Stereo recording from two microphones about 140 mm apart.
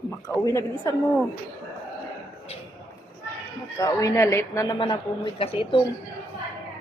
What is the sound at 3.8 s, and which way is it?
Speech, 20° left (ahead or behind).